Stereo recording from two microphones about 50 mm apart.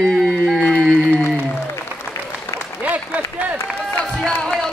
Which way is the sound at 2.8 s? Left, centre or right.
Right.